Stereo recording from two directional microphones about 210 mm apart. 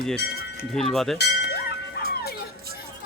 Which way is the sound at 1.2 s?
50° left (ahead or behind).